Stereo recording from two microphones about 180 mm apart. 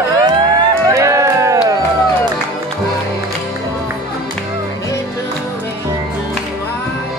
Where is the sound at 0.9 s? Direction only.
15° right (ahead or behind).